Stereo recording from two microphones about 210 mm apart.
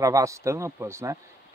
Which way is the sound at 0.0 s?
15° right (ahead or behind).